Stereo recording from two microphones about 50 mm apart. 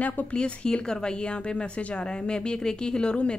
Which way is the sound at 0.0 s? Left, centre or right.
Left.